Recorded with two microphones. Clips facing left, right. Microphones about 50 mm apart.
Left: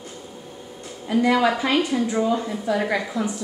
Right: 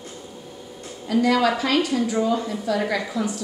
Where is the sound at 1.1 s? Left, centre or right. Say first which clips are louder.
Even; left.